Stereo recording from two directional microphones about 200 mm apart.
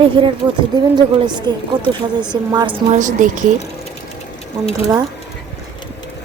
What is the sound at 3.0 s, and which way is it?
Speech, 40° right (ahead or behind).